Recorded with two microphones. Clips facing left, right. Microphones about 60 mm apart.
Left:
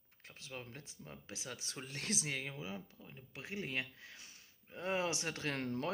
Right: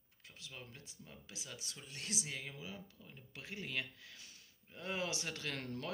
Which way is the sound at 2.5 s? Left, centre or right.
Left.